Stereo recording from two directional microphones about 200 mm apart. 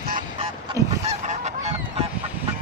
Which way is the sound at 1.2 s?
35° right (ahead or behind).